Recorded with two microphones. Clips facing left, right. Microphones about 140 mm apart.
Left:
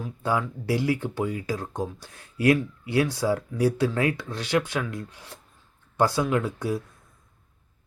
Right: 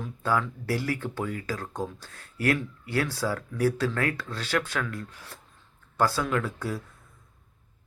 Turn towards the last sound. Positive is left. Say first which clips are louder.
# left 4 dB
turn(degrees=15)  # may be behind; listen again after turning